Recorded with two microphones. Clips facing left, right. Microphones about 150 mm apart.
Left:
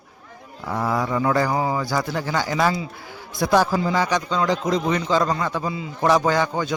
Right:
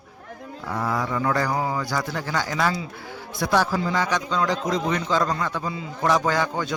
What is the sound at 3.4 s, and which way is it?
Speech, 35° left (ahead or behind).